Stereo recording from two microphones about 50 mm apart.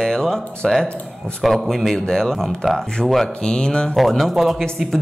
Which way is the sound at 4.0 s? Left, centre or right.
Centre.